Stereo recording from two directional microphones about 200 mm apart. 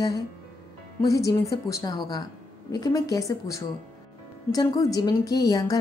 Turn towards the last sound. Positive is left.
turn(degrees=20)  # may be behind; listen again after turning